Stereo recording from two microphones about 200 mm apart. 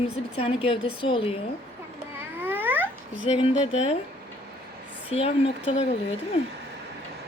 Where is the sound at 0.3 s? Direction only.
30° left (ahead or behind).